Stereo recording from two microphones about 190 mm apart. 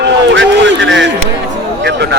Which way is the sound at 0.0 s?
70° right (ahead or behind).